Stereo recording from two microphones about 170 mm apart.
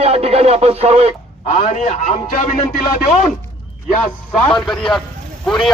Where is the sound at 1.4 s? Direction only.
45° left (ahead or behind).